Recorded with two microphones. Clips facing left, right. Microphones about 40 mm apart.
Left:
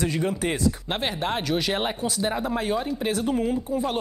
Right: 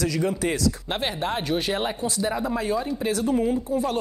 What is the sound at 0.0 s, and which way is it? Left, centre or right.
Speech, left.